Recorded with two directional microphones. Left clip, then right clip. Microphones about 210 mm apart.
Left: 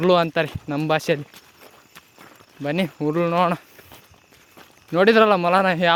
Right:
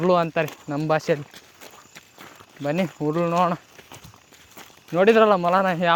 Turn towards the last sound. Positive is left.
turn(degrees=30)  # may be behind; listen again after turning